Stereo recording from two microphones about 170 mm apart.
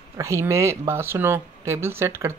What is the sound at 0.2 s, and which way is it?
Speech, 15° right (ahead or behind).